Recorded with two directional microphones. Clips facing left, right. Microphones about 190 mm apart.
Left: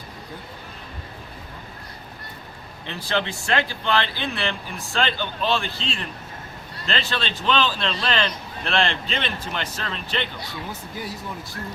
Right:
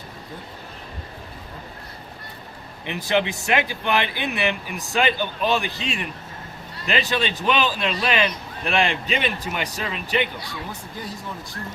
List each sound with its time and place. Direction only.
2.8 s speech: 15° right (ahead or behind)